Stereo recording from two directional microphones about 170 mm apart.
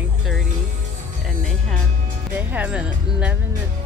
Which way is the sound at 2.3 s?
10° right (ahead or behind).